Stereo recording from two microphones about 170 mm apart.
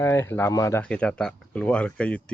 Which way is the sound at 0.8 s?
5° left (ahead or behind).